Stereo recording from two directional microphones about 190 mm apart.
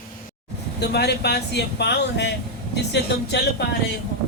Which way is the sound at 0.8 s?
60° left (ahead or behind).